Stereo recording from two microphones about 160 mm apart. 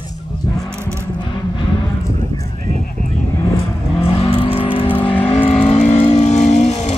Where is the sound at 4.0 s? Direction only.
35° left (ahead or behind).